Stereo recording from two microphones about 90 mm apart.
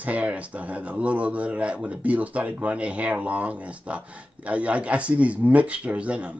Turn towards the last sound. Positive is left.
turn(degrees=-15)  # may be behind; listen again after turning